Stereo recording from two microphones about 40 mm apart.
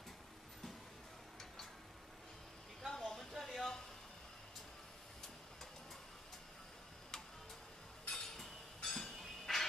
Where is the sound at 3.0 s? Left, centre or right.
Centre.